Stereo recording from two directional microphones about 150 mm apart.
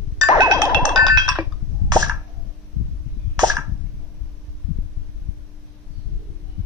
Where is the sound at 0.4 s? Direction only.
25° right (ahead or behind).